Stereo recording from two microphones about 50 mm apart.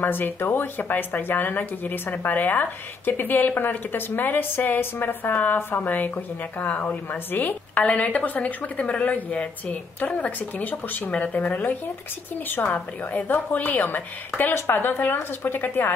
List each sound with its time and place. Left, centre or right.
0.0 s speech: left
7.8 s a woman's voice: left